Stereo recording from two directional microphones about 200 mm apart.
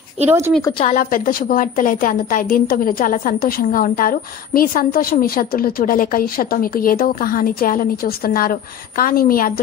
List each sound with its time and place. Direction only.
0.2 s a woman's voice: 30° right (ahead or behind)
0.9 s a woman's voice: 45° left (ahead or behind)